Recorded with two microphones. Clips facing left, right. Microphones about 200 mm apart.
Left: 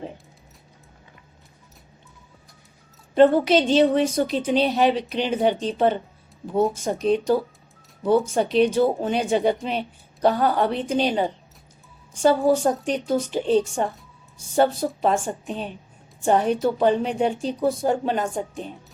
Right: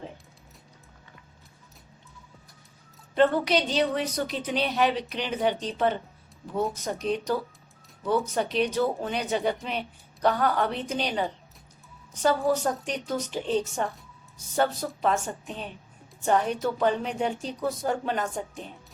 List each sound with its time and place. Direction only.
3.5 s a woman's voice: 25° left (ahead or behind)